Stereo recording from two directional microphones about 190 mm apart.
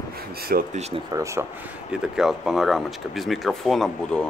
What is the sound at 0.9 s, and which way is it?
Speech, 15° right (ahead or behind).